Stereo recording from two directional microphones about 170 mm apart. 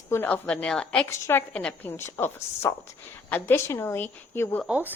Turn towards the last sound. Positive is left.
turn(degrees=-10)  # may be behind; listen again after turning